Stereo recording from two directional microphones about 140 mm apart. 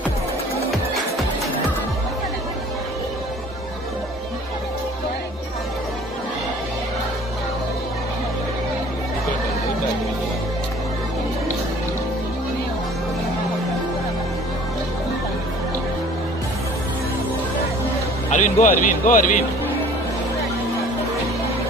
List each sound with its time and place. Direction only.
18.3 s speech: 65° left (ahead or behind)